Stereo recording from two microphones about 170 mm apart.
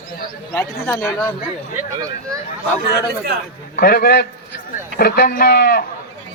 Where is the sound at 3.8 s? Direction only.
65° left (ahead or behind).